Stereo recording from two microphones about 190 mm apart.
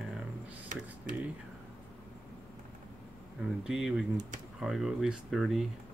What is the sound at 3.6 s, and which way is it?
Speech, 5° right (ahead or behind).